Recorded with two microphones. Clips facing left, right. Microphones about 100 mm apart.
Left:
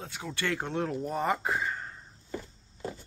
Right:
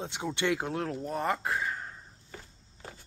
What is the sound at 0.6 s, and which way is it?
Speech, 5° right (ahead or behind).